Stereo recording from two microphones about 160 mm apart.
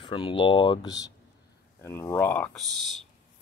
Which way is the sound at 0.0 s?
30° left (ahead or behind).